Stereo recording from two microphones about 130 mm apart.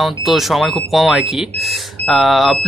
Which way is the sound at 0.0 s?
Centre (ahead or behind).